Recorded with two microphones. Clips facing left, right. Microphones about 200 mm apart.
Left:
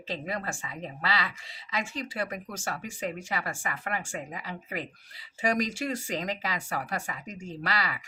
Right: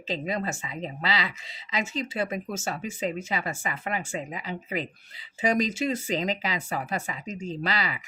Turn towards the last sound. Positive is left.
turn(degrees=-20)  # may be behind; listen again after turning